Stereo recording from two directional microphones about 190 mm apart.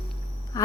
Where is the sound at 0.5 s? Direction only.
15° left (ahead or behind).